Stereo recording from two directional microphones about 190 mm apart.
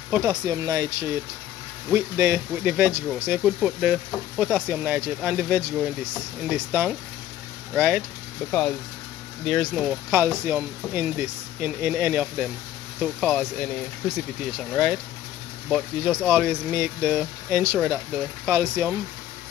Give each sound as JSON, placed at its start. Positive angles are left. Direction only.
{"t": 0.1, "sound": "speech", "side_deg": -15}
{"t": 8.5, "sound": "speech", "side_deg": 5}
{"t": 15.7, "sound": "speech", "side_deg": 0}